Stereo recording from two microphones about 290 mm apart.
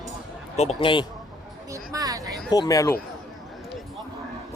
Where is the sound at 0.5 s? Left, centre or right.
Centre.